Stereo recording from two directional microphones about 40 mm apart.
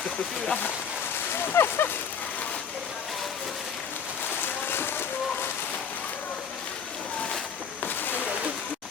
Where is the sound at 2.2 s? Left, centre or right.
Left.